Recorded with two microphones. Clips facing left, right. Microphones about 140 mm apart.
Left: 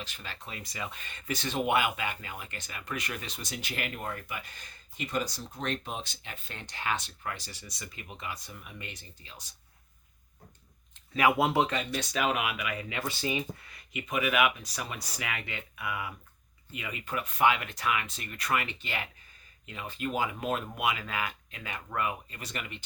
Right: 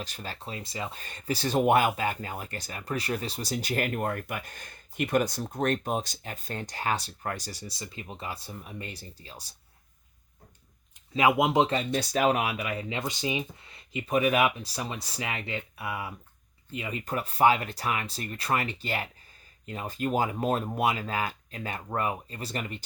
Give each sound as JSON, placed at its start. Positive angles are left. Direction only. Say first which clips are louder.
{"t": 0.0, "sound": "speech", "louder": "right 5 dB", "side_deg": -40}
{"t": 11.1, "sound": "speech", "louder": "right 2 dB", "side_deg": -20}
{"t": 11.9, "sound": "speech", "louder": "right 5 dB", "side_deg": -40}